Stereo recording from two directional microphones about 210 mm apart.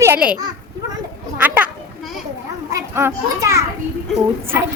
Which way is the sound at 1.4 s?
10° right (ahead or behind).